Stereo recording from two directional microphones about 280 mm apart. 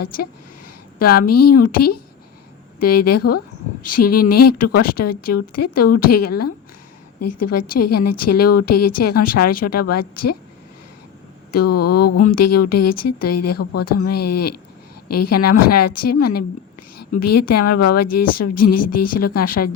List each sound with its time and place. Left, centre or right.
1.2 s a woman's voice: left
11.5 s a woman's voice: left